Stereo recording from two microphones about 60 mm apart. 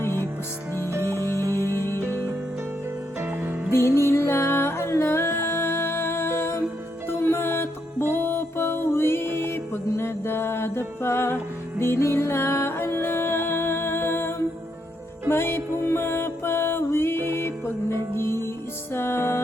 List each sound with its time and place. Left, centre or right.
0.0 s music: left
0.7 s music: right
3.7 s music: left